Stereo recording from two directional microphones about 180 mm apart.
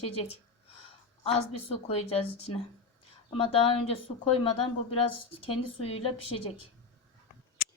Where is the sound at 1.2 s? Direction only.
35° left (ahead or behind).